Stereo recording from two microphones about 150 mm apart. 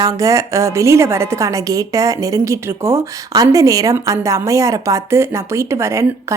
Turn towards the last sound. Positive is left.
turn(degrees=-20)  # may be behind; listen again after turning